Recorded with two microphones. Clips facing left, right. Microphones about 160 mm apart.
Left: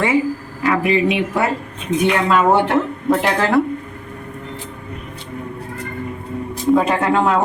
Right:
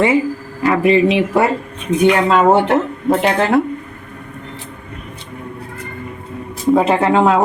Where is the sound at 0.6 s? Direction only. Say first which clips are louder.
Right 4 dB; 30° right (ahead or behind).